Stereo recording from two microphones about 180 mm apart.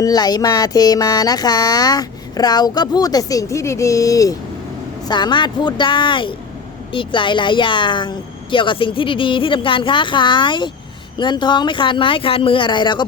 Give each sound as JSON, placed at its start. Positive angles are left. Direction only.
{"t": 0.0, "sound": "music", "side_deg": 20}